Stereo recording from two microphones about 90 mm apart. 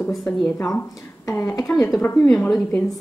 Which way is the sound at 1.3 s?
25° left (ahead or behind).